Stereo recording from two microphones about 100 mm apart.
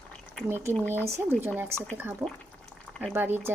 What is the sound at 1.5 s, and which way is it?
Speech, 25° right (ahead or behind).